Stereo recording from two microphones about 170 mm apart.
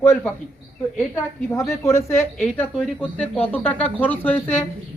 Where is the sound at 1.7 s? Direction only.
15° left (ahead or behind).